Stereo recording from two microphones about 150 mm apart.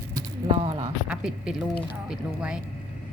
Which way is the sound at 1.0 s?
5° right (ahead or behind).